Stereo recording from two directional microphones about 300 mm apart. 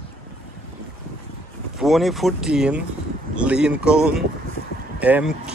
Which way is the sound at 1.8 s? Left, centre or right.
Centre.